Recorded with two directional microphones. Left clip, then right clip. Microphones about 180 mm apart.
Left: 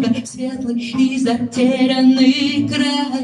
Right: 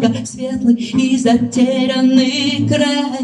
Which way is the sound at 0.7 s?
45° right (ahead or behind).